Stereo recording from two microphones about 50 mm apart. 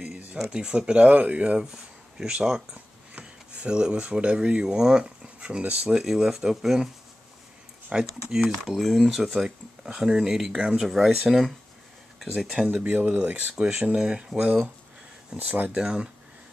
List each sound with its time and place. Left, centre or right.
0.5 s speech: centre
1.7 s speech: centre
6.0 s speech: centre
7.9 s speech: centre
13.1 s speech: right
13.9 s speech: centre
15.3 s speech: right
15.7 s speech: centre